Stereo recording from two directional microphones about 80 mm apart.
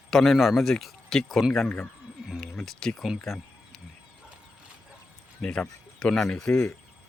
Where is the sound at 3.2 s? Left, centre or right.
Centre.